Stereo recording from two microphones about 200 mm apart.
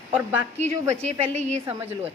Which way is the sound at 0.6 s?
35° right (ahead or behind).